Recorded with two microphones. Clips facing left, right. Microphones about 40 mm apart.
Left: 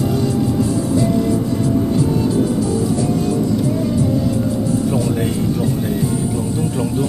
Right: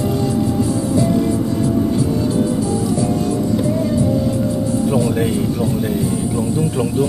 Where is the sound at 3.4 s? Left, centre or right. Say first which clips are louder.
Even; right.